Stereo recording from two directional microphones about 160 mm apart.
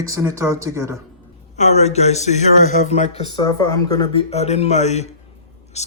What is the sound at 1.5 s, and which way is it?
Speech, 45° left (ahead or behind).